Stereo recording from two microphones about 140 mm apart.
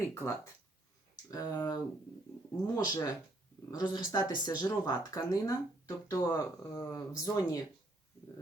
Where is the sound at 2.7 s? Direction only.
30° left (ahead or behind).